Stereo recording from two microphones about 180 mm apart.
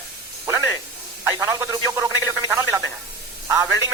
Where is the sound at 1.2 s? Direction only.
15° right (ahead or behind).